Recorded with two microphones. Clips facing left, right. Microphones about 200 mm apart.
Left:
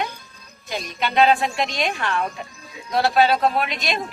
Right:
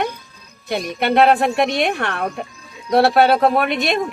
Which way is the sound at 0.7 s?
60° right (ahead or behind).